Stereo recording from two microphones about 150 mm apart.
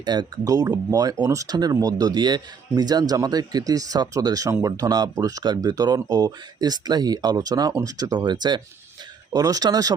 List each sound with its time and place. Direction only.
0.0 s speech: 30° right (ahead or behind)